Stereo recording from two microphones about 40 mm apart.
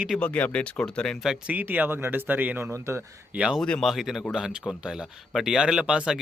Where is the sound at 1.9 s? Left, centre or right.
Right.